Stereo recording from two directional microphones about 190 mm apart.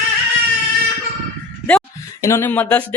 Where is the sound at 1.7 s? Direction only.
10° left (ahead or behind).